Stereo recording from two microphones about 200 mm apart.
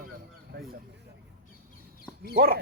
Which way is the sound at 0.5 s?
50° right (ahead or behind).